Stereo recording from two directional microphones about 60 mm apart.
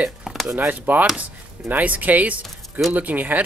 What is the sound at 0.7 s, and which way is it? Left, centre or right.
Speech, right.